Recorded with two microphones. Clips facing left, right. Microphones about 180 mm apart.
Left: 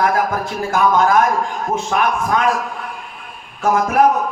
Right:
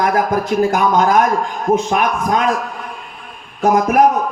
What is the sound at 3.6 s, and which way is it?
Speech, 20° right (ahead or behind).